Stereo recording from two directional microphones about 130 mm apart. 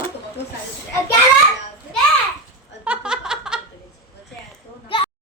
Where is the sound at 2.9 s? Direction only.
5° right (ahead or behind).